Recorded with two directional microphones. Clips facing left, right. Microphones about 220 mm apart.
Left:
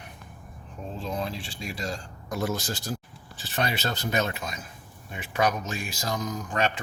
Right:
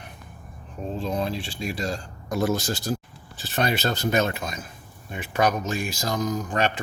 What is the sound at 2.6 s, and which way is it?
Speech, 45° right (ahead or behind).